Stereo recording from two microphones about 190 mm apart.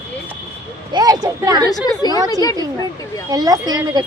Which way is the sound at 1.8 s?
20° left (ahead or behind).